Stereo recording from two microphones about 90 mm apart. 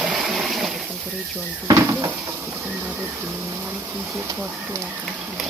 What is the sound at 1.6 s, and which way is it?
Speech, 35° right (ahead or behind).